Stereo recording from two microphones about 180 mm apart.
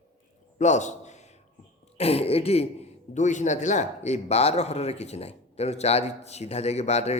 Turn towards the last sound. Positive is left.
turn(degrees=35)  # may be behind; listen again after turning